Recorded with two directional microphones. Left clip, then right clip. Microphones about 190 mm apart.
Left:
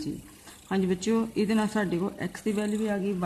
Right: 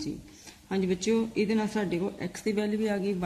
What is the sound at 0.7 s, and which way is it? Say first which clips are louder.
Speech: even; 20° left (ahead or behind).